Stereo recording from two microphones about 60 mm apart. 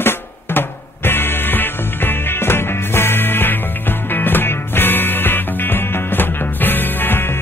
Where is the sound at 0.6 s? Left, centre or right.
Left.